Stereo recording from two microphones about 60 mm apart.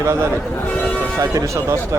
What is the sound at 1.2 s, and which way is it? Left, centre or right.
Speech, right.